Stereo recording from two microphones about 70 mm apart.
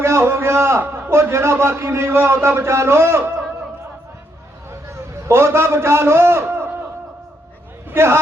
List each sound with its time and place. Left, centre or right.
0.0 s a man's voice: right
5.3 s a man's voice: right
7.9 s speech: right